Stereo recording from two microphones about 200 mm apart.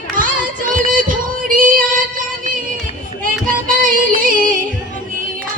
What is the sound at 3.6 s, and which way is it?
Music, 45° right (ahead or behind).